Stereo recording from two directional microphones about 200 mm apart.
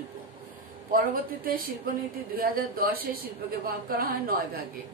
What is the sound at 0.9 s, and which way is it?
Speech, 45° right (ahead or behind).